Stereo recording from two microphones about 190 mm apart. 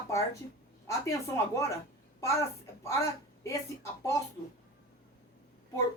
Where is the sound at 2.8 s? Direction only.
15° left (ahead or behind).